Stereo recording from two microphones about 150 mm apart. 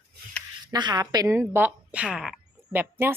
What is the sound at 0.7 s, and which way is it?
Speech, 25° right (ahead or behind).